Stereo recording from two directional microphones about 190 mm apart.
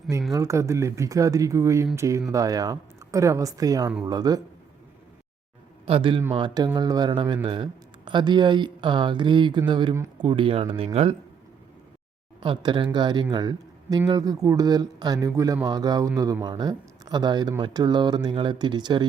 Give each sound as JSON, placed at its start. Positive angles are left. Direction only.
{"t": 0.3, "sound": "speech", "side_deg": -15}
{"t": 5.8, "sound": "a man's voice", "side_deg": -25}
{"t": 10.2, "sound": "speech", "side_deg": -30}
{"t": 12.4, "sound": "a man's voice", "side_deg": -25}